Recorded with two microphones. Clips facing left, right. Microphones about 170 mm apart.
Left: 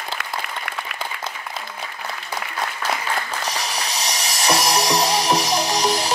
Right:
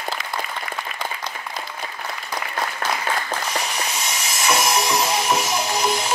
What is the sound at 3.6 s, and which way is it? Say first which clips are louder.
Music: even; 35° left (ahead or behind).